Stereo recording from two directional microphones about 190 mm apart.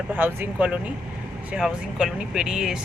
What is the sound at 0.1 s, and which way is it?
Speech, 10° right (ahead or behind).